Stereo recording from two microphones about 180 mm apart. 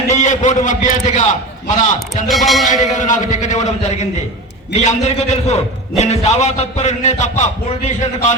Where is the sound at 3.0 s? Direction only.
45° left (ahead or behind).